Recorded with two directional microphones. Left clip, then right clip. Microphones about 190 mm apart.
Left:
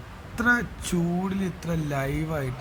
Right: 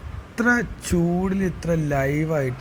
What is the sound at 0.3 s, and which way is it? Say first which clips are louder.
Speech: right 2 dB; 15° right (ahead or behind).